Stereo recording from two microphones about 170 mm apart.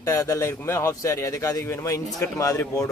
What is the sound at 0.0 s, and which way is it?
A man's voice, 20° left (ahead or behind).